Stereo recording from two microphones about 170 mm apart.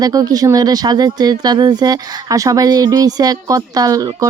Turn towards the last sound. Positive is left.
turn(degrees=-20)  # may be behind; listen again after turning